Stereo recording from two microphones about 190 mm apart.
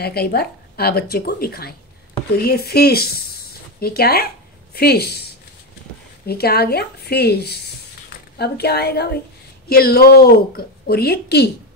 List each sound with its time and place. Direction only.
0.0 s a woman's voice: 55° left (ahead or behind)
6.2 s a woman's voice: 55° left (ahead or behind)